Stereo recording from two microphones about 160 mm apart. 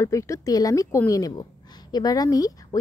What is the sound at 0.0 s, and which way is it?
Speech, 20° left (ahead or behind).